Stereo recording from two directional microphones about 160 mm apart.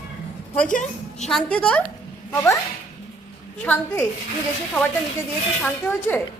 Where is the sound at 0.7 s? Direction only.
50° left (ahead or behind).